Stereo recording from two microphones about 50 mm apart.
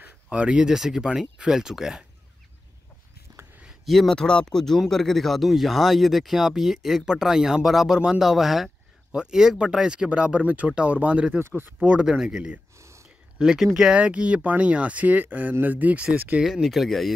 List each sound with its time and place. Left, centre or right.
0.3 s speech: right
3.8 s a man's voice: centre
4.1 s speech: centre; by 11.3 s right
11.3 s speech: right
12.0 s speech: centre
12.7 s whispering: right
13.4 s speech: centre
13.9 s speech: right
16.4 s speech: centre